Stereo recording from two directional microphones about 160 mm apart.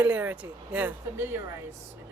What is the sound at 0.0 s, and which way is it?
Speech, 10° right (ahead or behind).